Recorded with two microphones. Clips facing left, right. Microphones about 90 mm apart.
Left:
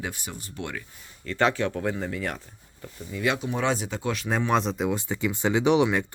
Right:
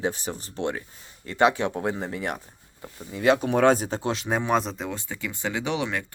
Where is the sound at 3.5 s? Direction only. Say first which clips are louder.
Right 7 dB; 50° right (ahead or behind); by 4.3 s 25° right (ahead or behind).